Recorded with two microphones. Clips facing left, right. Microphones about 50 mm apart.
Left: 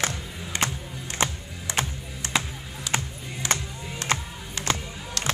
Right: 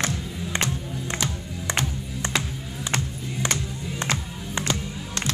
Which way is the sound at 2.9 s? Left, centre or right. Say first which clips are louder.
Right 1 dB; right.